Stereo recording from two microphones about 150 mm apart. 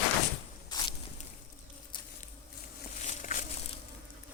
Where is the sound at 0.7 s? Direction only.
30° left (ahead or behind).